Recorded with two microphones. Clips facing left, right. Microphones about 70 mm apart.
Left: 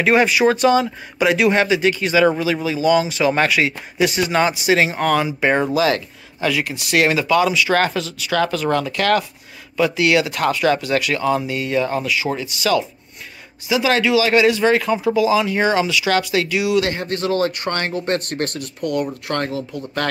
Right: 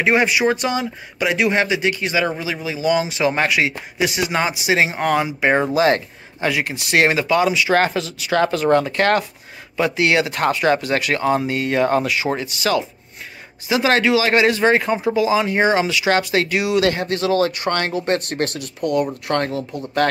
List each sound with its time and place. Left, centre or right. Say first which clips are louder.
0.0 s speech: left 2 dB; centre
5.8 s speech: right 2 dB; right
6.4 s speech: even; right
16.9 s speech: right 2 dB; right
17.2 s speech: right 1 dB; left
17.6 s speech: right 2 dB; right
19.2 s speech: right 2 dB; right